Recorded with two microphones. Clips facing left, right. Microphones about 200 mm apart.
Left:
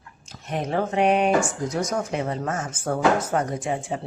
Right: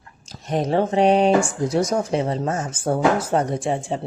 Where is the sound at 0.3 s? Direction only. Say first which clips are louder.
Right 5 dB; 35° right (ahead or behind).